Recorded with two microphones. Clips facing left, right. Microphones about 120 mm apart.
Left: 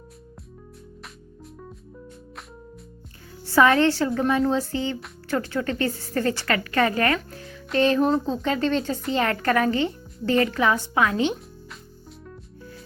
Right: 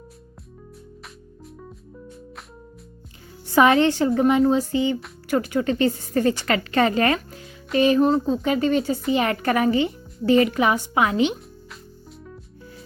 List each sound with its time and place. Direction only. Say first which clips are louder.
3.4 s a woman's voice: right 1 dB; 15° right (ahead or behind)
7.7 s a woman's voice: right 2 dB; 10° right (ahead or behind)